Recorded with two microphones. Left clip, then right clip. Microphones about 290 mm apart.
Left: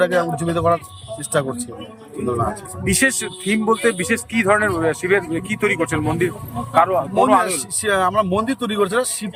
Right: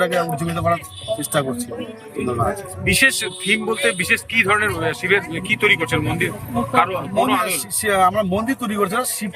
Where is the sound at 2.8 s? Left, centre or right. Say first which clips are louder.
Right 3 dB; centre.